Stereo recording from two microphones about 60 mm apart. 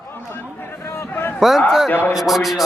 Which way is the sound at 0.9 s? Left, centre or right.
Left.